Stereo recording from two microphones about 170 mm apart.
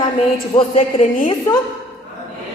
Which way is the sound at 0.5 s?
35° left (ahead or behind).